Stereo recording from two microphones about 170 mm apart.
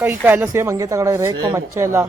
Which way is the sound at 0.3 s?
10° right (ahead or behind).